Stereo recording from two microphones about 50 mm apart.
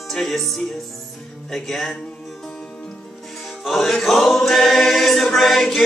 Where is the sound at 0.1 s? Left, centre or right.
Centre.